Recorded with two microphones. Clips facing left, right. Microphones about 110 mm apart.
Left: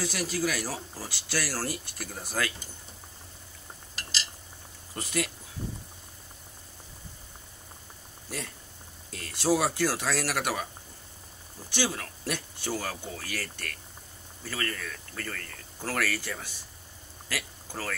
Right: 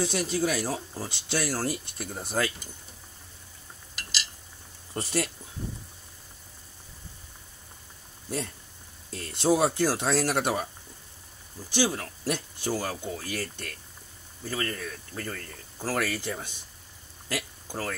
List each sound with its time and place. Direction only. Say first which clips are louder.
0.0 s speech: right 3 dB; 25° right (ahead or behind)
3.9 s a sound: even; 35° left (ahead or behind)
4.9 s speech: right 2 dB; 35° right (ahead or behind)
9.1 s speech: right 2 dB; 25° right (ahead or behind)
11.7 s speech: right 4 dB; 15° right (ahead or behind)
17.3 s a sound: right 3 dB; 15° right (ahead or behind)